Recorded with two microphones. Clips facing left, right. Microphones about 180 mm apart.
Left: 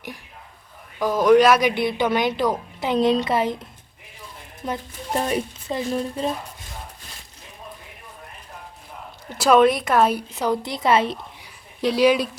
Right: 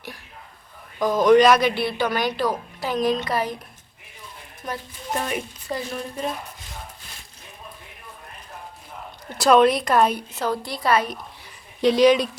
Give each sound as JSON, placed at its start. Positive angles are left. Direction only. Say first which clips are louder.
{"t": 0.9, "sound": "speech", "louder": "even", "side_deg": 10}
{"t": 4.6, "sound": "speech", "louder": "left 3 dB", "side_deg": 25}
{"t": 9.4, "sound": "a woman's voice", "louder": "even", "side_deg": 5}
{"t": 11.8, "sound": "speech", "louder": "right 2 dB", "side_deg": 5}